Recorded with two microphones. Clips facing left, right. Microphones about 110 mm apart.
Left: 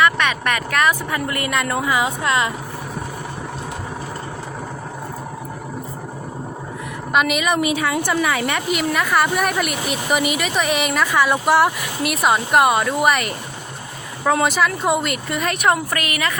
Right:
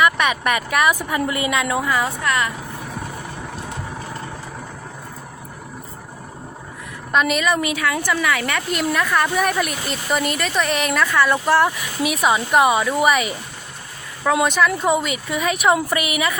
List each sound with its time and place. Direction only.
0.0 s speech: 15° right (ahead or behind)
1.9 s speech: 10° left (ahead or behind)
2.2 s a woman's voice: 25° left (ahead or behind)
7.1 s speech: 5° left (ahead or behind)
7.5 s a woman's voice: 20° left (ahead or behind)
8.7 s speech: 5° left (ahead or behind)
12.0 s speech: centre (ahead or behind)
14.4 s speech: 5° left (ahead or behind)